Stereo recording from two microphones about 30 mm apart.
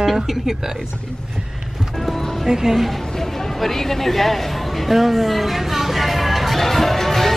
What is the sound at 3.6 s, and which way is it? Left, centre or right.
A woman's voice, centre.